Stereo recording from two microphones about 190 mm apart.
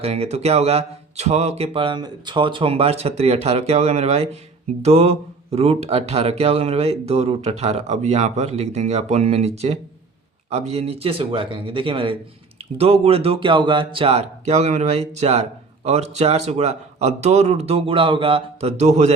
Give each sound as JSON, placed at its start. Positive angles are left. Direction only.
{"t": 0.0, "sound": "speech", "side_deg": -35}